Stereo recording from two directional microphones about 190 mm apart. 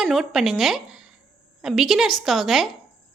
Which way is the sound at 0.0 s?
Centre (ahead or behind).